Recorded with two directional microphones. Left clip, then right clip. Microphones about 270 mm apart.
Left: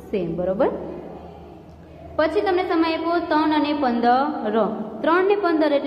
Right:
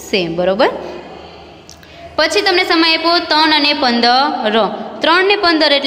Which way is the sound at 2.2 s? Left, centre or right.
Right.